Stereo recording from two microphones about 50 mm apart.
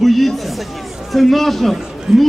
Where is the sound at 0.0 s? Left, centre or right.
Centre.